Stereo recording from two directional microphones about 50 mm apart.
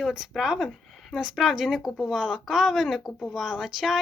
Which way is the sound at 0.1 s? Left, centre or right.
Centre.